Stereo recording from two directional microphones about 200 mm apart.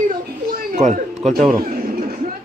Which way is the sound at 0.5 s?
40° right (ahead or behind).